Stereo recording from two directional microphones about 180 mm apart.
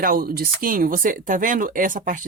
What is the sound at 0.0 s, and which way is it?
Speech, 55° right (ahead or behind).